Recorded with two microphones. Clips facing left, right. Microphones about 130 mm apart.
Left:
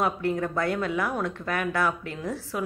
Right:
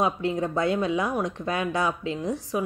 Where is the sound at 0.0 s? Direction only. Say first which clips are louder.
Right 1 dB; 20° right (ahead or behind).